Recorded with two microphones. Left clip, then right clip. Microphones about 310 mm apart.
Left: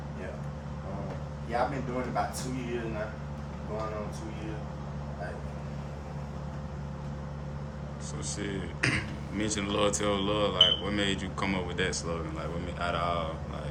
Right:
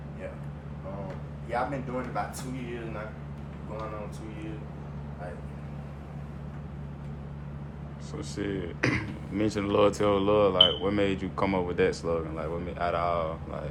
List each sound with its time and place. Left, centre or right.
8.4 s speech: centre